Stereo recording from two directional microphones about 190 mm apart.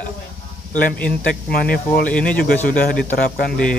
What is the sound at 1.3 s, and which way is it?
Speech, 50° left (ahead or behind).